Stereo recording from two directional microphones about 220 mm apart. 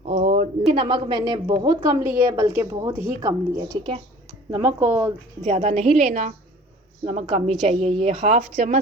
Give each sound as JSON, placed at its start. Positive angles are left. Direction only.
{"t": 0.0, "sound": "a sound", "side_deg": -30}
{"t": 0.7, "sound": "a woman's voice", "side_deg": -25}
{"t": 5.4, "sound": "a woman's voice", "side_deg": -30}